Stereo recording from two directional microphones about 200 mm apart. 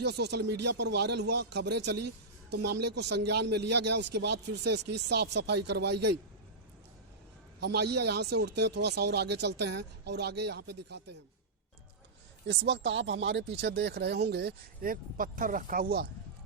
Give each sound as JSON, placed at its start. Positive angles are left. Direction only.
{"t": 0.0, "sound": "a man's voice", "side_deg": -55}
{"t": 7.6, "sound": "a man's voice", "side_deg": -55}
{"t": 12.5, "sound": "a man's voice", "side_deg": -60}